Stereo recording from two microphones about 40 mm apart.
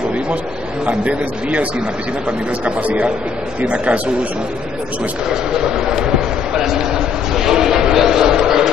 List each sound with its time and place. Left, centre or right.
0.8 s a man's voice: right
5.3 s speech: centre
6.7 s a sound: centre